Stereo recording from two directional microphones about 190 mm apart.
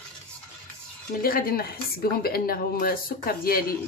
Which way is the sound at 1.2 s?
50° left (ahead or behind).